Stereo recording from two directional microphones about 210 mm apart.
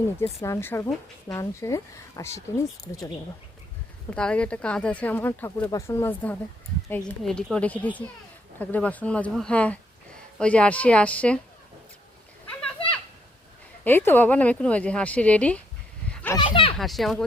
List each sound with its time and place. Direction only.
0.4 s speech: 15° left (ahead or behind)
4.1 s speech: 5° left (ahead or behind)
7.2 s speech: centre (ahead or behind)
13.8 s speech: 10° left (ahead or behind)
16.0 s a sound: 5° left (ahead or behind)
16.4 s a sound: 25° left (ahead or behind)
16.7 s speech: centre (ahead or behind)